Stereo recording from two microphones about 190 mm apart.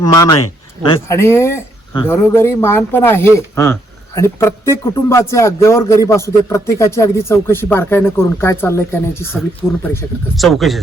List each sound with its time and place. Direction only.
0.0 s speech: 20° left (ahead or behind)
9.6 s speech: 5° right (ahead or behind)